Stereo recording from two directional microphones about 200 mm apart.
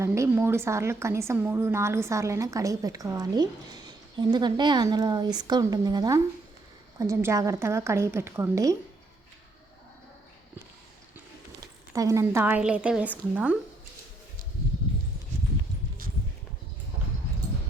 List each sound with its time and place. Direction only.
0.0 s a woman's voice: 15° right (ahead or behind)
11.9 s a woman's voice: 15° right (ahead or behind)